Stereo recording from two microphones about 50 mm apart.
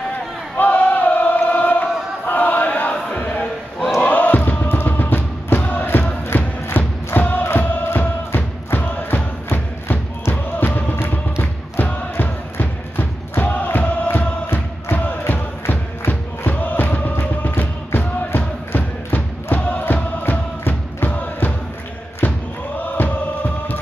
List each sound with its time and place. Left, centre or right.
0.6 s chant: left
2.9 s music: left
4.0 s crowd: left
4.7 s music: left
9.5 s music: left
10.3 s music: left
13.4 s music: left
22.2 s crowd: left
22.9 s music: left